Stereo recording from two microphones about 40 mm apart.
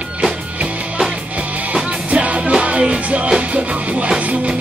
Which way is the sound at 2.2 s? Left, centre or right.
Right.